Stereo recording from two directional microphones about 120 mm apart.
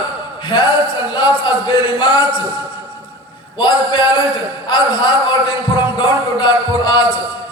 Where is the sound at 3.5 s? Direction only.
40° left (ahead or behind).